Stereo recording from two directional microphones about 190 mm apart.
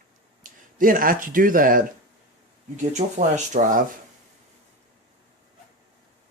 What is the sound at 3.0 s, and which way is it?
Speech, 40° right (ahead or behind).